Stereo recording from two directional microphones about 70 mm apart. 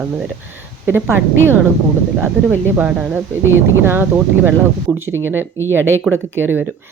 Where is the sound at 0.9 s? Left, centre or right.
Right.